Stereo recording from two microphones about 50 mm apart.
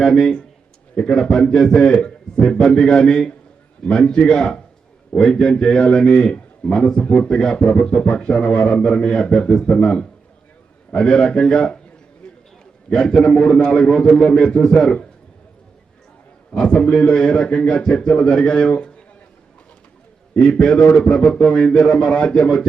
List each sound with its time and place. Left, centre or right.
0.0 s a man's voice: centre
12.9 s a man's voice: centre
16.6 s a man's voice: centre
18.7 s a sound: left
20.3 s a man's voice: centre